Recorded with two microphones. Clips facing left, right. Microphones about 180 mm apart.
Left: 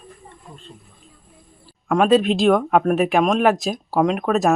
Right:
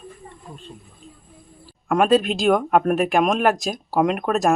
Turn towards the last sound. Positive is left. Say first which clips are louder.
# left 1 dB
turn(degrees=0)  # may be behind; listen again after turning